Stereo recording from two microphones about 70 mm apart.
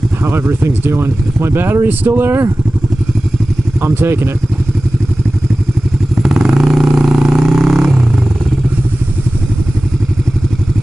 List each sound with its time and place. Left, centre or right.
0.2 s speech: right
3.8 s speech: right
6.2 s vehicle: centre